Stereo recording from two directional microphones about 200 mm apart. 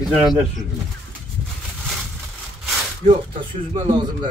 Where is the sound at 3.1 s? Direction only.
25° right (ahead or behind).